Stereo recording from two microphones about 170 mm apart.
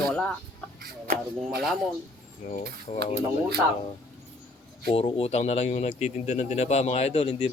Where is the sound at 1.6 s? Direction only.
Centre (ahead or behind).